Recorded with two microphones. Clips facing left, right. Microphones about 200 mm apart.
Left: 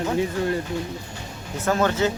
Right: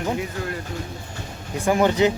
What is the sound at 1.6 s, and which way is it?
Speech, 15° right (ahead or behind).